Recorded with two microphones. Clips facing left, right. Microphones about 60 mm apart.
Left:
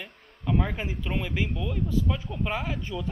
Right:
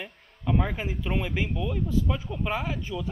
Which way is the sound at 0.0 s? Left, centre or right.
Centre.